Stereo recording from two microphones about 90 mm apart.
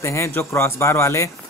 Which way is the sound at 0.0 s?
30° left (ahead or behind).